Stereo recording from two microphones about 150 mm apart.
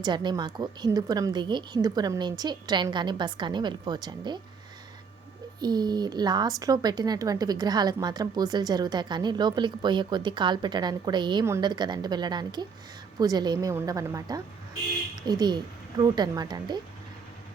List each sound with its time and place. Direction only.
0.0 s a woman's voice: 30° right (ahead or behind)
5.5 s a woman's voice: 25° right (ahead or behind)